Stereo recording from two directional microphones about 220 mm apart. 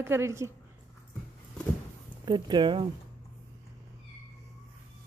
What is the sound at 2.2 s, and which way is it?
Speech, 20° right (ahead or behind).